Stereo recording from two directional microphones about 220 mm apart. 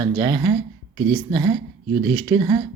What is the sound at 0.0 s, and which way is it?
Speech, 20° right (ahead or behind).